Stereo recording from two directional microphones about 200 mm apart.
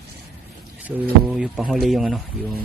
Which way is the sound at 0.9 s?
5° right (ahead or behind).